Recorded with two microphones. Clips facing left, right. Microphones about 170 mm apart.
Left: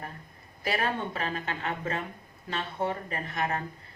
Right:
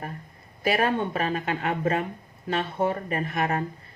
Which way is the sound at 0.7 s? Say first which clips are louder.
Right 6 dB; 55° right (ahead or behind).